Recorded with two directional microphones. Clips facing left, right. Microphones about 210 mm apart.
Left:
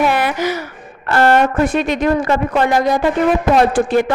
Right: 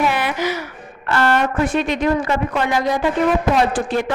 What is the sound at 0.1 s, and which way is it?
A woman's voice, 45° left (ahead or behind).